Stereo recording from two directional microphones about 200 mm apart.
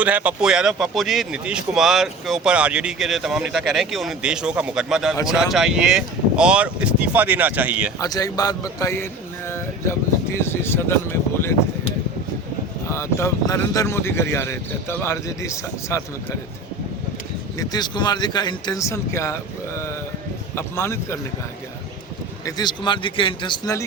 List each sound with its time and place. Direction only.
0.0 s speech: 5° right (ahead or behind)
7.9 s speech: 20° left (ahead or behind)
12.9 s speech: 15° left (ahead or behind)
17.6 s speech: 20° left (ahead or behind)
22.4 s speech: 20° left (ahead or behind)